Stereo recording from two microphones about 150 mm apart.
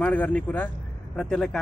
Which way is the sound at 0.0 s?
10° left (ahead or behind).